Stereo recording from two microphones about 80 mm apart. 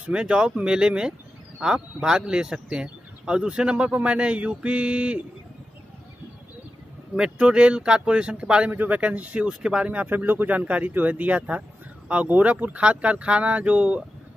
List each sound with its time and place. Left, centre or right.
0.0 s speech: centre
7.2 s speech: centre